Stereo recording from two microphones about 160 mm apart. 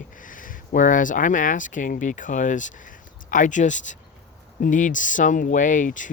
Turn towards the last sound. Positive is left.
turn(degrees=55)  # may be behind; listen again after turning